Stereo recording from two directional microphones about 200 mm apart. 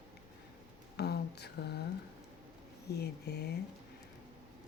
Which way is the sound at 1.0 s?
55° left (ahead or behind).